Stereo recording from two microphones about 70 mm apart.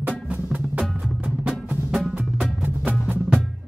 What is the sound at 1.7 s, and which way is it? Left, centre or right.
Music, centre.